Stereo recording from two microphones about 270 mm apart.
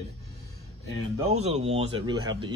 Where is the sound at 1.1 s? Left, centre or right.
Right.